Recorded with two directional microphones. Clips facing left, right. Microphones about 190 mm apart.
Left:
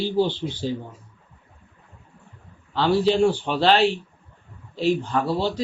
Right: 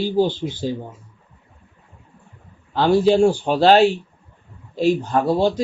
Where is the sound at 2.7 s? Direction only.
45° right (ahead or behind).